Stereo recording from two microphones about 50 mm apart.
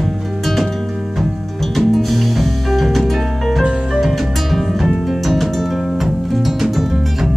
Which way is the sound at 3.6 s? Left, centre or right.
Centre.